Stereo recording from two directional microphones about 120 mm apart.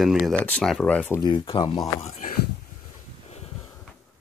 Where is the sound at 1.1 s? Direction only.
40° left (ahead or behind).